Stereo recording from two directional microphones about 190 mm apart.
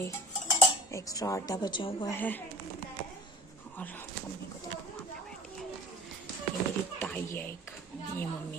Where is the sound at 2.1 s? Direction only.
10° left (ahead or behind).